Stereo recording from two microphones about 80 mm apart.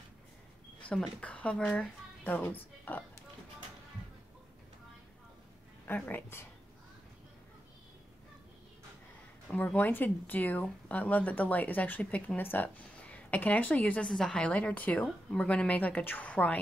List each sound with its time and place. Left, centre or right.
0.8 s speech: left
1.2 s speech: centre
6.0 s speech: left
9.5 s speech: centre
12.0 s speech: centre
12.4 s speech: left